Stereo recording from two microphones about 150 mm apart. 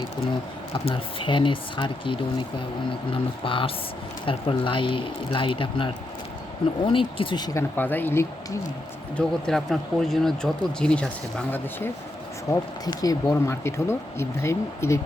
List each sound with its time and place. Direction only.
0.9 s speech: 35° left (ahead or behind)
7.8 s speech: 15° left (ahead or behind)
9.1 s speech: centre (ahead or behind)
12.5 s speech: 25° left (ahead or behind)